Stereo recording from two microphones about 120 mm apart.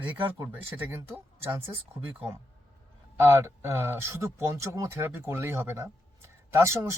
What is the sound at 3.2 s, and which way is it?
Speech, 20° right (ahead or behind).